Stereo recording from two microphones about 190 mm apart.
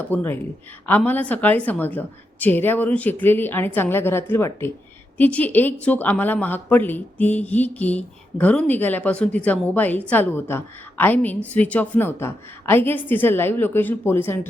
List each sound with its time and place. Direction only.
0.0 s a woman's voice: 10° left (ahead or behind)